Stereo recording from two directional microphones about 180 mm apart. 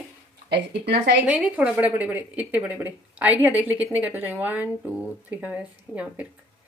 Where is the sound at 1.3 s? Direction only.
5° right (ahead or behind).